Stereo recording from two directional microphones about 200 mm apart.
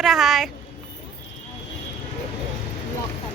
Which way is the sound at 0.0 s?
Centre (ahead or behind).